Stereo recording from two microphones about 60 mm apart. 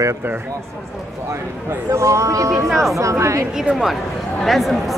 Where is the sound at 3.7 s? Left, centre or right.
Centre.